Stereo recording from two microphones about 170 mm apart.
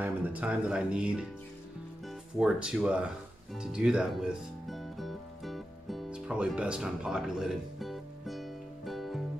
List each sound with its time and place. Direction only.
0.0 s speech: 10° right (ahead or behind)
3.5 s music: 5° right (ahead or behind)